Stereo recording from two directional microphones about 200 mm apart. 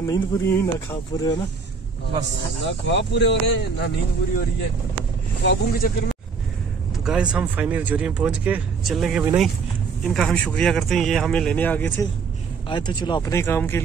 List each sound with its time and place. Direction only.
0.0 s speech: 15° left (ahead or behind)
2.6 s speech: 60° left (ahead or behind)
5.4 s speech: 55° left (ahead or behind)
7.1 s speech: 5° right (ahead or behind)
12.6 s speech: 25° left (ahead or behind)